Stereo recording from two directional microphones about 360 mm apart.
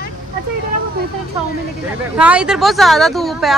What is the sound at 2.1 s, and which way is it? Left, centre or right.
A woman's voice, centre.